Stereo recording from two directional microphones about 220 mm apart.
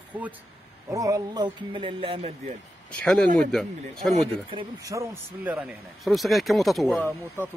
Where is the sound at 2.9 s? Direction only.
5° left (ahead or behind).